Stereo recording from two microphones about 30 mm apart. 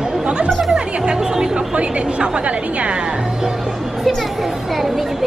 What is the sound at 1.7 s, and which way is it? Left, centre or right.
A woman's voice, right.